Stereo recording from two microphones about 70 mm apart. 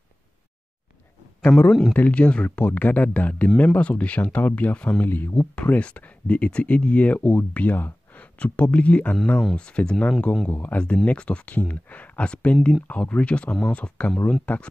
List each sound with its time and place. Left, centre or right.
1.7 s speech: centre
2.0 s speech: centre
5.0 s speech: left
9.1 s speech: centre